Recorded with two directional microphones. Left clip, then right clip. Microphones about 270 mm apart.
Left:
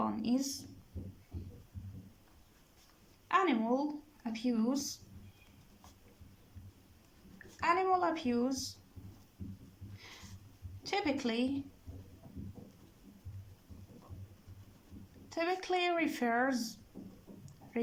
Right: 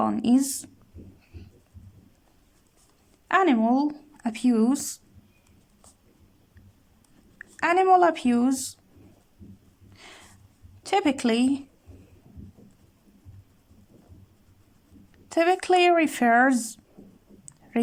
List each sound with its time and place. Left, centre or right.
0.0 s a sound: right
3.2 s speech: right
7.6 s speech: right
10.8 s speech: right
15.3 s speech: right